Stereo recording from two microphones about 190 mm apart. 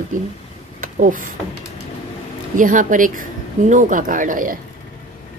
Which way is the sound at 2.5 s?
45° right (ahead or behind).